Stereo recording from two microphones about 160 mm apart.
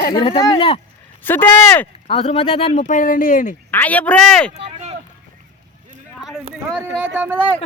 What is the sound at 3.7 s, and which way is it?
Speech, 10° left (ahead or behind).